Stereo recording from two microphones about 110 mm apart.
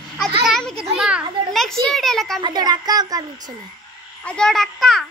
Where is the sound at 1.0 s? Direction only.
10° right (ahead or behind).